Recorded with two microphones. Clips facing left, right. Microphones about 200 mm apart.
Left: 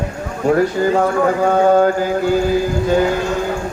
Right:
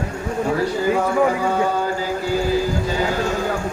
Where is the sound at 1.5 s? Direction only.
55° left (ahead or behind).